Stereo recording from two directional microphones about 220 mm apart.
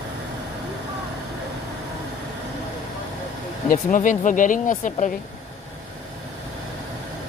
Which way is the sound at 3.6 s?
35° left (ahead or behind).